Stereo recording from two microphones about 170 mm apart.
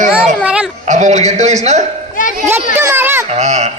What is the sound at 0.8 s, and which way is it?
A man's voice, 45° right (ahead or behind).